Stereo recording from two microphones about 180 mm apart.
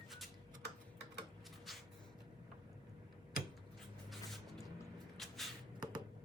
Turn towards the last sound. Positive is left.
turn(degrees=0)  # may be behind; listen again after turning